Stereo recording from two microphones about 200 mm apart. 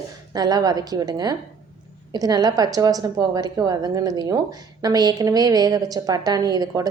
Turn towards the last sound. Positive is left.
turn(degrees=-20)  # may be behind; listen again after turning